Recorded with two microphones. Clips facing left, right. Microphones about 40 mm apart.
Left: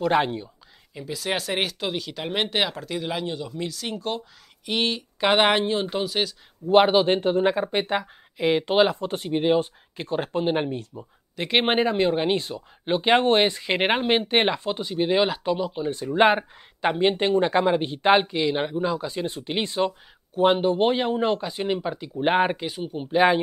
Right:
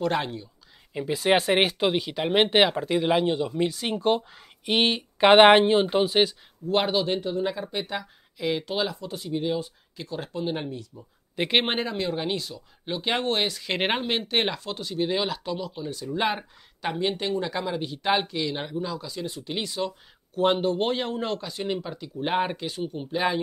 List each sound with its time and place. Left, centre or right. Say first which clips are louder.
0.1 s speech: left 6 dB; left
0.9 s speech: right 6 dB; right
6.7 s speech: left 7 dB; left
7.1 s speech: left 6 dB; left
11.6 s speech: left 6 dB; centre
13.7 s speech: left 3 dB; centre
14.0 s speech: left 5 dB; left
20.3 s speech: left 3 dB; centre
22.6 s speech: left 1 dB; centre
23.1 s speech: left 7 dB; left